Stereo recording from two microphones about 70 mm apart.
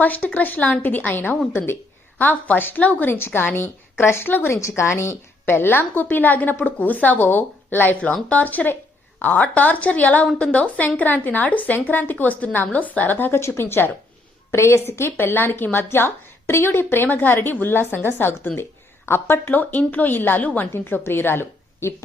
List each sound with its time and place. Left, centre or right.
0.0 s a woman's voice: left
4.8 s a woman's voice: left